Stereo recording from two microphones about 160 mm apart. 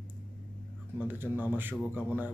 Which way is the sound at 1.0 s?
10° right (ahead or behind).